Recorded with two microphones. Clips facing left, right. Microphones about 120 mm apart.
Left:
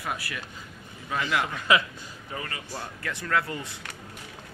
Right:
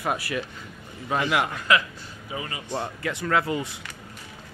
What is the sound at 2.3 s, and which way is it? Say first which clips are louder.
Speech: right 5 dB; 20° right (ahead or behind).